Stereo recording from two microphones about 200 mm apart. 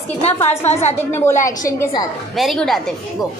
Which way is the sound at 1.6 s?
15° left (ahead or behind).